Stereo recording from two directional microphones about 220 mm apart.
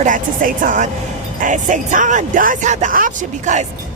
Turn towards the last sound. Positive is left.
turn(degrees=-35)  # may be behind; listen again after turning